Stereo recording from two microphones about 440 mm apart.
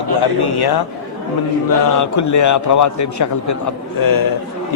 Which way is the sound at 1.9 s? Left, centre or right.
Left.